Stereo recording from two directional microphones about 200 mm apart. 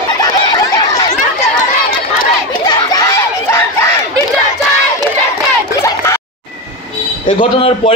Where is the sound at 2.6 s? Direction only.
15° left (ahead or behind).